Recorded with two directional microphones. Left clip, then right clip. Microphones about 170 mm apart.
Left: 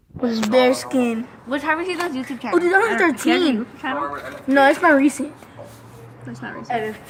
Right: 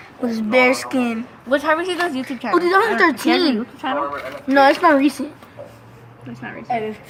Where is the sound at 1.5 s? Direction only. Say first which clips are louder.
Right 4 dB; 55° right (ahead or behind).